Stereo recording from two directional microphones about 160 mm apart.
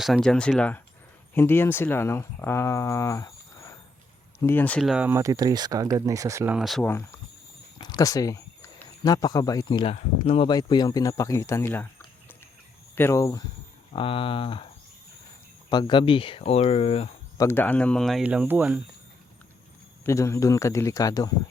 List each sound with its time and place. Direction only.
0.0 s speech: centre (ahead or behind)
5.1 s speech: 20° right (ahead or behind)
6.5 s speech: centre (ahead or behind)
7.8 s speech: 25° left (ahead or behind)
9.9 s speech: 40° left (ahead or behind)
10.5 s speech: 25° left (ahead or behind)
13.0 s speech: 15° left (ahead or behind)
13.9 s speech: 35° left (ahead or behind)
15.7 s speech: 30° left (ahead or behind)
17.3 s speech: 15° left (ahead or behind); by 18.8 s 10° right (ahead or behind)
20.1 s speech: 20° left (ahead or behind)